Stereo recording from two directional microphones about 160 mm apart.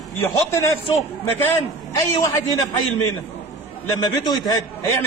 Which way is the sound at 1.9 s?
20° left (ahead or behind).